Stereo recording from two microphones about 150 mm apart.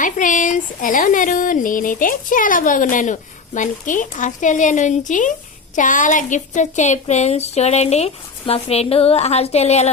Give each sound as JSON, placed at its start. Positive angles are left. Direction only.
{"t": 0.0, "sound": "speech", "side_deg": 60}